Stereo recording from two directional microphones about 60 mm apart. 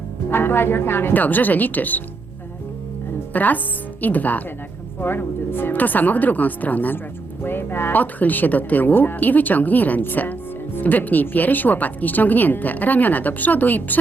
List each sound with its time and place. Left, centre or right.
0.3 s a woman's voice: left
3.3 s speech: left